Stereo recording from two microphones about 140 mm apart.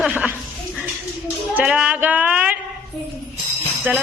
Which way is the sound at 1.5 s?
10° right (ahead or behind).